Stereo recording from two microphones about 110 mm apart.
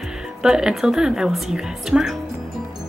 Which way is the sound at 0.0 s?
5° right (ahead or behind).